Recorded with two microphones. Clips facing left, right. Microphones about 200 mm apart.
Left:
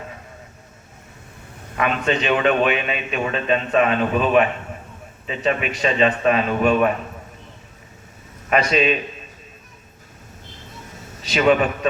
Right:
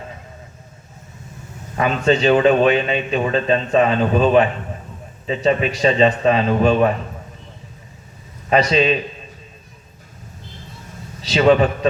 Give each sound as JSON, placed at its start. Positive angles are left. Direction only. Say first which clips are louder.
{"t": 1.8, "sound": "a man's voice", "louder": "right 5 dB", "side_deg": -30}
{"t": 8.4, "sound": "a man's voice", "louder": "right 3 dB", "side_deg": -30}
{"t": 11.2, "sound": "a man's voice", "louder": "right 3 dB", "side_deg": -30}